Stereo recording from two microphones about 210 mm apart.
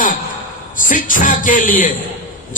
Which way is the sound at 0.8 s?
40° left (ahead or behind).